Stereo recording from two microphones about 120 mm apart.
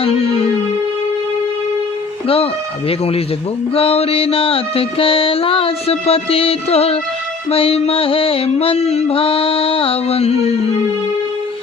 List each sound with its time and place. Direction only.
0.0 s music: 55° left (ahead or behind)
2.2 s speech: 55° left (ahead or behind)
3.8 s mantra: 55° left (ahead or behind)